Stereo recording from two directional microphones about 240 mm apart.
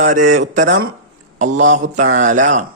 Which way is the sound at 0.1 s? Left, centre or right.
Right.